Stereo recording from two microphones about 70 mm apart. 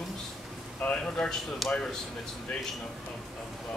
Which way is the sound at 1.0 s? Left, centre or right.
Centre.